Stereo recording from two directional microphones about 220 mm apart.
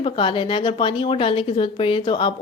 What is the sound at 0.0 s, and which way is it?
A woman's voice, 25° left (ahead or behind).